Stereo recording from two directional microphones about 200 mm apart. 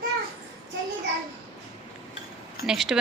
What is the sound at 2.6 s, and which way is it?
Speech, centre (ahead or behind).